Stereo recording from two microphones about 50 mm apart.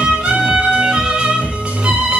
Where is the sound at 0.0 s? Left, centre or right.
Centre.